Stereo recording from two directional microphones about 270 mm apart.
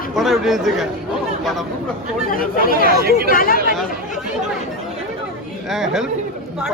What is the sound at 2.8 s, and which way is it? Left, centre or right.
Speech, right.